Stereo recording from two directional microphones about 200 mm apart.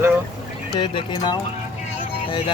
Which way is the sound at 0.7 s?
25° left (ahead or behind).